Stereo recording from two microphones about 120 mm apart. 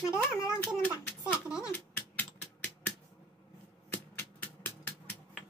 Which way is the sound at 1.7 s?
15° left (ahead or behind).